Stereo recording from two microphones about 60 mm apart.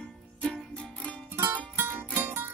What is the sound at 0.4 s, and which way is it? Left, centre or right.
Music, centre.